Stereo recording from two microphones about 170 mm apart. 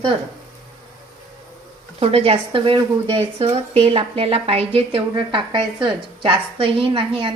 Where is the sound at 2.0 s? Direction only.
35° right (ahead or behind).